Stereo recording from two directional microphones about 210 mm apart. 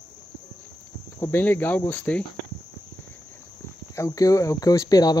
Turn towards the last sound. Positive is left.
turn(degrees=20)  # may be behind; listen again after turning